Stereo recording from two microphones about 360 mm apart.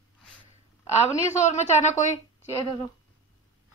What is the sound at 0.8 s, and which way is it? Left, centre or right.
A woman's voice, centre.